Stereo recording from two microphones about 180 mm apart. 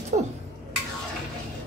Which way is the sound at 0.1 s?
40° right (ahead or behind).